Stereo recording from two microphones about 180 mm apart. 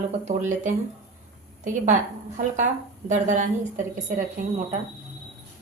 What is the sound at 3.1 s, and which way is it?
Speech, 45° right (ahead or behind).